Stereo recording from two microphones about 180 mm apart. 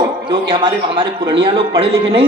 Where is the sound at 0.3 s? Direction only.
30° right (ahead or behind).